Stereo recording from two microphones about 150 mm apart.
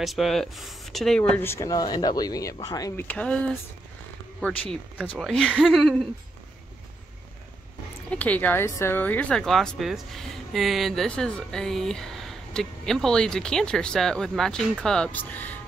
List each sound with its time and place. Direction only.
0.0 s speech: centre (ahead or behind)
1.3 s speech: 15° left (ahead or behind)
3.0 s speech: 10° left (ahead or behind)
8.1 s speech: 10° left (ahead or behind)